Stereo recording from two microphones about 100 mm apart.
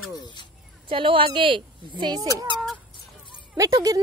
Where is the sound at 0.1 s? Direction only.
45° left (ahead or behind).